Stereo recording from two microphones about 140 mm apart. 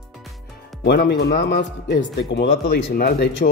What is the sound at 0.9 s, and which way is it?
Speech, 90° left.